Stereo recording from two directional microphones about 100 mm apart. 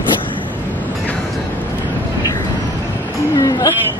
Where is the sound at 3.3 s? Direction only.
35° left (ahead or behind).